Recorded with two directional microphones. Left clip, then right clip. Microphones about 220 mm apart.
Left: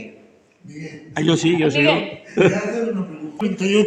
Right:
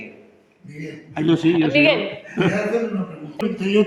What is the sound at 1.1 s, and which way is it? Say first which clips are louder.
Speech: even; 45° left (ahead or behind).